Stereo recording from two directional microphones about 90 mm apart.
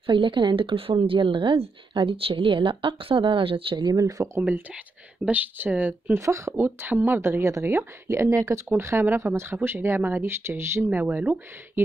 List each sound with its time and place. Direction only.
0.0 s a woman's voice: 65° right (ahead or behind); by 3.7 s 80° right
3.7 s speech: 45° right (ahead or behind)
5.2 s speech: 20° right (ahead or behind)
6.1 s speech: 35° right (ahead or behind); by 11.8 s 20° right (ahead or behind)